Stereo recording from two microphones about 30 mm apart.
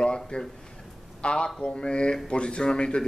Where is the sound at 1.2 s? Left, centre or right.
Left.